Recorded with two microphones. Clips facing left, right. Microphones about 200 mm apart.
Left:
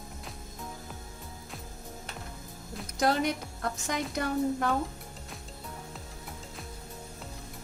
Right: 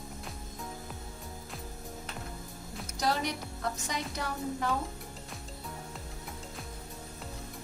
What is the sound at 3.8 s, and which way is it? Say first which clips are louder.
Speech: left 5 dB; 55° left (ahead or behind).